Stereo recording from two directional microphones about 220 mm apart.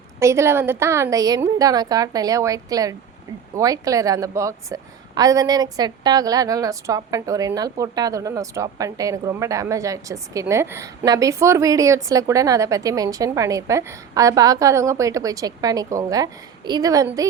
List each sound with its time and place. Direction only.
0.2 s a woman's voice: 10° right (ahead or behind)